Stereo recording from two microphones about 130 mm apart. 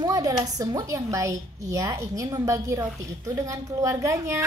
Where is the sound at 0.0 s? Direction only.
30° right (ahead or behind).